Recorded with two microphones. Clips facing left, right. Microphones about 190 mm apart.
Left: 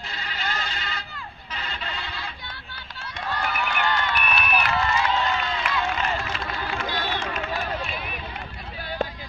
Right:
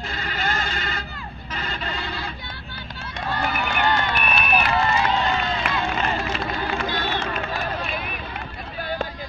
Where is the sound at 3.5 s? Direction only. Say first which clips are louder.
Right 3 dB; 35° right (ahead or behind).